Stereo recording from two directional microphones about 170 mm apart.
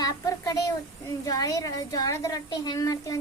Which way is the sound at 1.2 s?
20° left (ahead or behind).